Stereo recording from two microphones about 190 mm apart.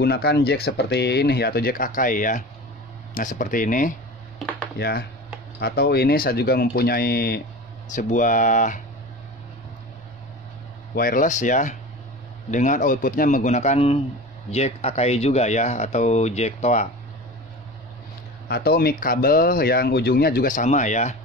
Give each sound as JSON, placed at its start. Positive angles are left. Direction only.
{"t": 0.0, "sound": "speech", "side_deg": 60}
{"t": 4.7, "sound": "speech", "side_deg": 55}
{"t": 7.9, "sound": "speech", "side_deg": 40}
{"t": 11.0, "sound": "speech", "side_deg": 45}
{"t": 18.5, "sound": "speech", "side_deg": 55}